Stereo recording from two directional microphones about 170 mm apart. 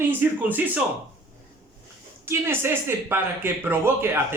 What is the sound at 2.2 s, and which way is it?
Speech, 15° right (ahead or behind).